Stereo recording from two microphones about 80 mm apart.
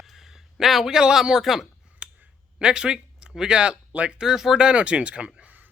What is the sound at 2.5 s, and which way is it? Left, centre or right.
Speech, centre.